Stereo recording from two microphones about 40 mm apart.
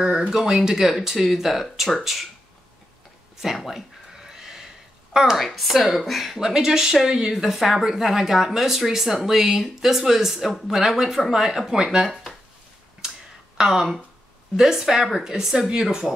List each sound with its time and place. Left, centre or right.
0.3 s a woman's voice: centre
3.6 s a sound: centre
5.1 s speech: centre
5.4 s speech: centre
6.4 s a woman's voice: centre
12.1 s a sound: centre
13.6 s a woman's voice: centre